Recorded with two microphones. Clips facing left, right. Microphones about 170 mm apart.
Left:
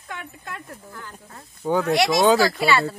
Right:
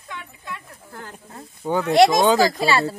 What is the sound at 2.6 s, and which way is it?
Speech, 35° right (ahead or behind).